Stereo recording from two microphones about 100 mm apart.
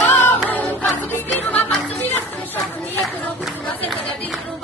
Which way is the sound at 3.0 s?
Centre (ahead or behind).